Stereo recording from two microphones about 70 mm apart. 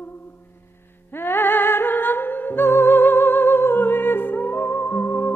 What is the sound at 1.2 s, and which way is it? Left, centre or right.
Music, left.